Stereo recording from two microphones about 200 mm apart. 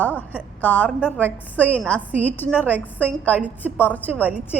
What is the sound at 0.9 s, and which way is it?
Speech, 5° right (ahead or behind).